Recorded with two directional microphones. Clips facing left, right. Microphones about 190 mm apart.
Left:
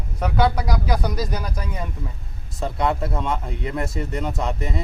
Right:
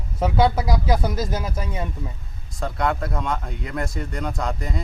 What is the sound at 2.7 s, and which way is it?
Speech, 25° left (ahead or behind).